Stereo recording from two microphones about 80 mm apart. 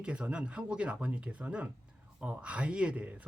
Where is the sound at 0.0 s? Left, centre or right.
Centre.